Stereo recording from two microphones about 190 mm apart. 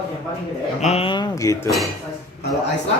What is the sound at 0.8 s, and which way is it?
Speech, 35° left (ahead or behind).